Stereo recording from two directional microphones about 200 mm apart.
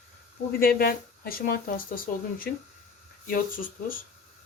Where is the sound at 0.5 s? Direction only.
45° left (ahead or behind).